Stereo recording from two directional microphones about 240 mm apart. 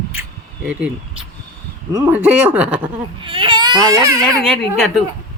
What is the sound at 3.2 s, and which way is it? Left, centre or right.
Speech, right.